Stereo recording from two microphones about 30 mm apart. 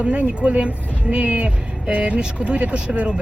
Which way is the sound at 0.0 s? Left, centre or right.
Right.